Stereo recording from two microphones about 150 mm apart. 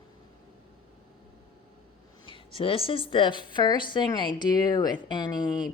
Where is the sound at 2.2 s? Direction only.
35° left (ahead or behind).